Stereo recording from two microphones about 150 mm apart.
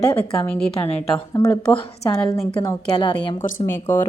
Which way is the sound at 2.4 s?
40° left (ahead or behind).